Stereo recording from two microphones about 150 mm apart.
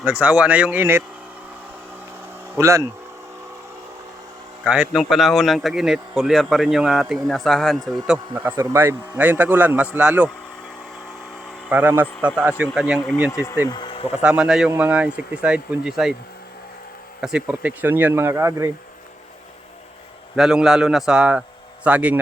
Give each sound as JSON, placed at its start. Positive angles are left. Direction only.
{"t": 0.0, "sound": "a man's voice", "side_deg": -10}
{"t": 2.6, "sound": "speech", "side_deg": -20}
{"t": 4.6, "sound": "a man's voice", "side_deg": -5}
{"t": 11.7, "sound": "a man's voice", "side_deg": -10}
{"t": 13.3, "sound": "speech", "side_deg": 20}
{"t": 13.7, "sound": "speech", "side_deg": 30}
{"t": 14.2, "sound": "a man's voice", "side_deg": -5}
{"t": 17.2, "sound": "a man's voice", "side_deg": -5}
{"t": 20.3, "sound": "a man's voice", "side_deg": -5}